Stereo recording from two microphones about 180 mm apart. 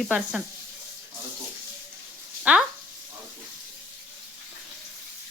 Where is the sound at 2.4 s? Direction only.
5° right (ahead or behind).